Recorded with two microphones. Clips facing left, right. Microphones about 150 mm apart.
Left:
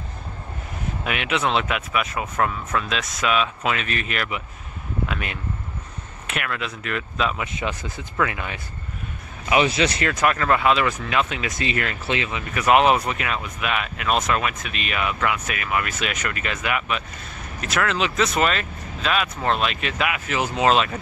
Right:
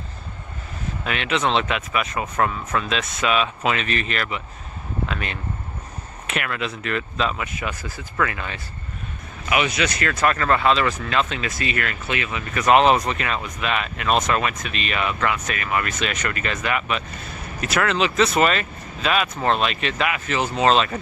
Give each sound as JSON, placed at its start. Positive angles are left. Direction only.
{"t": 1.0, "sound": "speech", "side_deg": 10}
{"t": 6.2, "sound": "speech", "side_deg": 0}
{"t": 7.3, "sound": "speech", "side_deg": 25}
{"t": 9.5, "sound": "speech", "side_deg": 30}
{"t": 10.1, "sound": "speech", "side_deg": 10}
{"t": 12.5, "sound": "speech", "side_deg": 10}